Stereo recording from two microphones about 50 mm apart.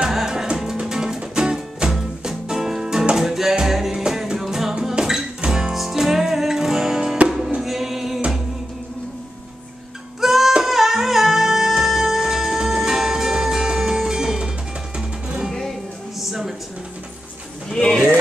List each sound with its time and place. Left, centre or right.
0.0 s music: centre
10.2 s music: centre
16.2 s a sound: centre
17.6 s pigeon: centre